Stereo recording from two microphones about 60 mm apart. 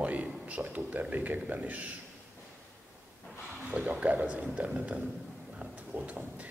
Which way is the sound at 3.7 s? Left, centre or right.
Right.